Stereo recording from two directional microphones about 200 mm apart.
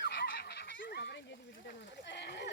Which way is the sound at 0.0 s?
55° left (ahead or behind).